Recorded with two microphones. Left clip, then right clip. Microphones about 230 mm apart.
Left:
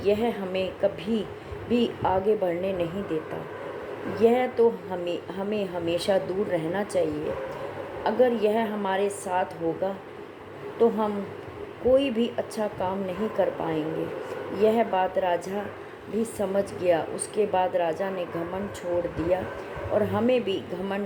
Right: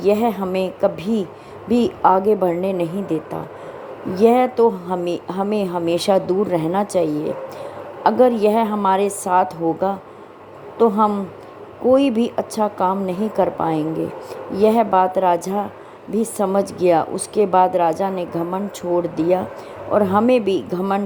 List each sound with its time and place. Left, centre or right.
0.0 s a woman's voice: right